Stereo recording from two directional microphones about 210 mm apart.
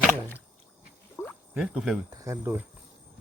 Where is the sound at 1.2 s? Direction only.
15° left (ahead or behind).